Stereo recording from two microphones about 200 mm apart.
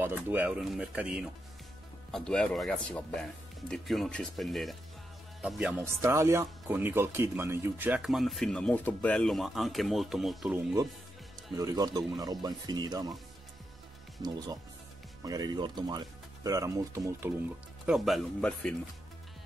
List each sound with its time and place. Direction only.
0.0 s speech: 10° right (ahead or behind)
14.2 s speech: 20° right (ahead or behind)
17.8 s speech: centre (ahead or behind)